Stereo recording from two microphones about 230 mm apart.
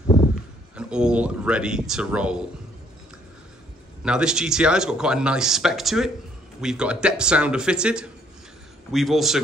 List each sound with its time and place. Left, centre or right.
0.7 s speech: centre
4.0 s speech: centre